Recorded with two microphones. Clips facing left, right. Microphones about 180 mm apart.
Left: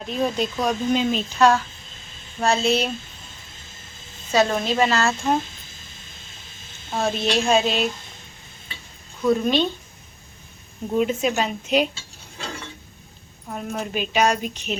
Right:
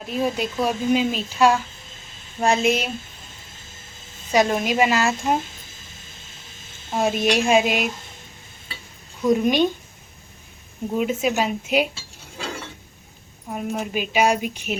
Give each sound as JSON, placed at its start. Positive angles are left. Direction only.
{"t": 0.1, "sound": "a woman's voice", "side_deg": -10}
{"t": 4.3, "sound": "a woman's voice", "side_deg": -15}
{"t": 6.9, "sound": "a woman's voice", "side_deg": -10}
{"t": 9.2, "sound": "a woman's voice", "side_deg": -15}
{"t": 10.9, "sound": "a woman's voice", "side_deg": -5}
{"t": 13.5, "sound": "a woman's voice", "side_deg": -10}